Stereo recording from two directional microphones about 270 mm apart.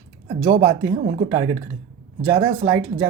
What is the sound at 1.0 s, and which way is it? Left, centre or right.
Speech, right.